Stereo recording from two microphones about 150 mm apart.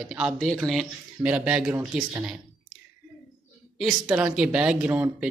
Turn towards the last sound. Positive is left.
turn(degrees=-10)  # may be behind; listen again after turning